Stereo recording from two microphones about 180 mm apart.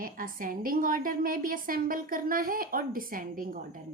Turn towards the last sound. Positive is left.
turn(degrees=-50)  # may be behind; listen again after turning